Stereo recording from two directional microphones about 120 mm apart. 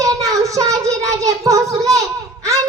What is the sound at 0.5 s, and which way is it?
A child's voice, 30° right (ahead or behind).